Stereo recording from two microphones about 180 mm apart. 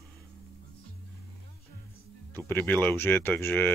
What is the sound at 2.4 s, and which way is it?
Speech, 10° left (ahead or behind).